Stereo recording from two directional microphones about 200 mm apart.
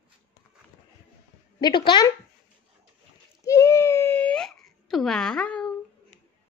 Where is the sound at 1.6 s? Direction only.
25° left (ahead or behind).